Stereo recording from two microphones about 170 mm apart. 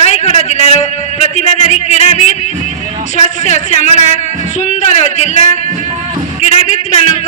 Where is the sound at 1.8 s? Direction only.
40° left (ahead or behind).